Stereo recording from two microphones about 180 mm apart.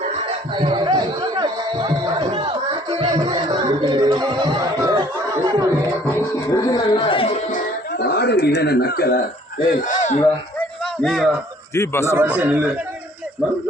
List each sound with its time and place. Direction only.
0.5 s chatter: 25° right (ahead or behind)
6.1 s music: 20° left (ahead or behind)
7.9 s speech: 65° left (ahead or behind)
9.6 s a sound: 45° left (ahead or behind)
11.0 s a sound: centre (ahead or behind)
11.7 s speech: 15° left (ahead or behind)
12.1 s a man's voice: 10° right (ahead or behind)